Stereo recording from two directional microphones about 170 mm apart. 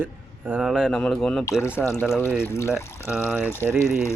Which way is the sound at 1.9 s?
15° left (ahead or behind).